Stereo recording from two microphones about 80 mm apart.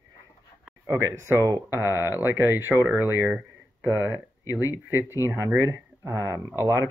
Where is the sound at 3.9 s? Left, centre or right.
Right.